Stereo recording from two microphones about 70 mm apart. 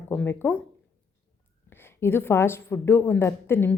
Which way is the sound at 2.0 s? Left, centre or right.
Left.